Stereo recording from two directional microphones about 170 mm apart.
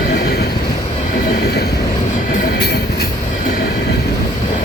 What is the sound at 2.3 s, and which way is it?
Train, 60° left (ahead or behind).